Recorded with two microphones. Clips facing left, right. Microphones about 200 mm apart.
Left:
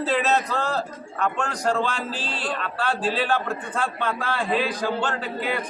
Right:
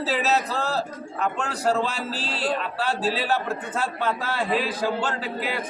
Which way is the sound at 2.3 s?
40° right (ahead or behind).